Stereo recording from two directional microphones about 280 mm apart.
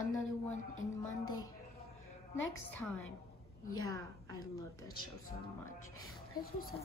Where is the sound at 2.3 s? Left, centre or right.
Left.